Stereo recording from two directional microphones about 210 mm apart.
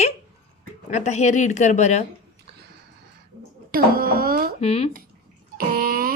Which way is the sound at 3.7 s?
45° right (ahead or behind).